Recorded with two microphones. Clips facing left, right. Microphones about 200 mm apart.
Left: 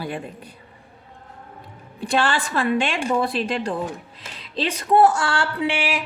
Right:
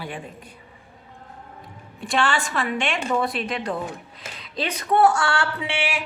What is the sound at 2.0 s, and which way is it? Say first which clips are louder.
A woman's voice: left 2 dB; 35° left (ahead or behind).